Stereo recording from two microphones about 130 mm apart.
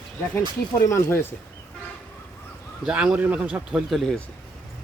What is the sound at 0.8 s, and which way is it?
Speech, 20° left (ahead or behind).